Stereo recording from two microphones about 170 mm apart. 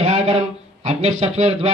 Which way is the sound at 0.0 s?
35° right (ahead or behind).